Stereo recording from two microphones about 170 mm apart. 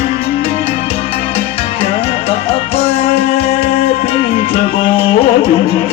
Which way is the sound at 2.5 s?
35° left (ahead or behind).